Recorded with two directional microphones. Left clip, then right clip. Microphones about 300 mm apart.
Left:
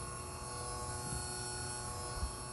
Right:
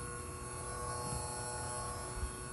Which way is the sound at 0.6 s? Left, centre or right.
Centre.